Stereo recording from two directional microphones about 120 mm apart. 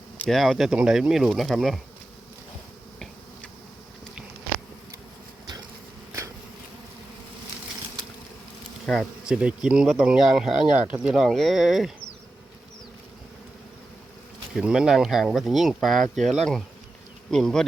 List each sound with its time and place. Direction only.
0.3 s speech: centre (ahead or behind)
8.9 s speech: 5° right (ahead or behind)
14.5 s speech: 5° right (ahead or behind)